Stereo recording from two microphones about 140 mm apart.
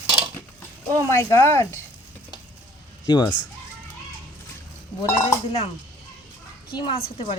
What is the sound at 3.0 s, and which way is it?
Speech, 30° left (ahead or behind).